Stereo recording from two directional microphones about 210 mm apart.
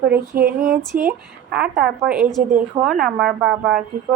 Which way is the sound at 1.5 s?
5° right (ahead or behind).